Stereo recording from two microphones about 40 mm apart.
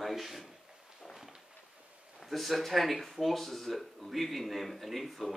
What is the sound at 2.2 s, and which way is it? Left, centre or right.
Speech, centre.